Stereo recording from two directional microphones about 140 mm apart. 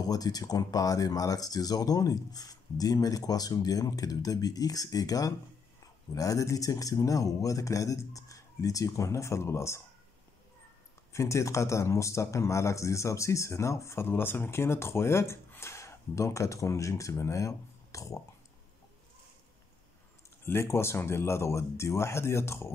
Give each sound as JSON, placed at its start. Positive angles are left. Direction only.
{"t": 0.0, "sound": "speech", "side_deg": 25}
{"t": 11.1, "sound": "speech", "side_deg": 20}
{"t": 20.4, "sound": "speech", "side_deg": 20}